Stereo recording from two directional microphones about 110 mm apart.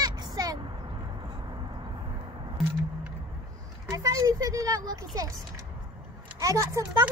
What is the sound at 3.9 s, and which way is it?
Speech, 30° right (ahead or behind).